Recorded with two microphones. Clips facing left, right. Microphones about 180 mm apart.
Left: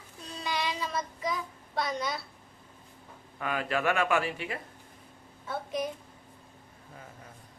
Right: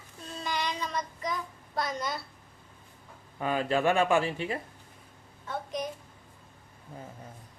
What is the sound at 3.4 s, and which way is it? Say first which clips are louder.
Speech: right 3 dB; 30° right (ahead or behind).